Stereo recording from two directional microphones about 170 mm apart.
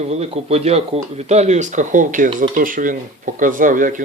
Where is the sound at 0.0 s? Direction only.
40° right (ahead or behind).